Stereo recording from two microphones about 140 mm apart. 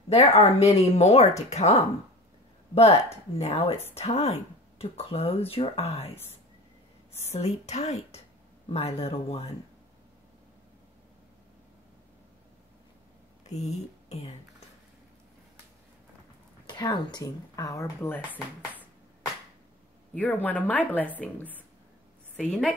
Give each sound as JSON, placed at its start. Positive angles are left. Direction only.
{"t": 0.1, "sound": "speech", "side_deg": 45}
{"t": 7.2, "sound": "speech", "side_deg": 50}
{"t": 13.5, "sound": "speech", "side_deg": 50}
{"t": 16.6, "sound": "speech", "side_deg": 30}
{"t": 20.2, "sound": "a woman's voice", "side_deg": 10}